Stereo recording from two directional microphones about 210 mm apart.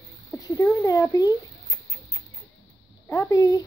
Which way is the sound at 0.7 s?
15° left (ahead or behind).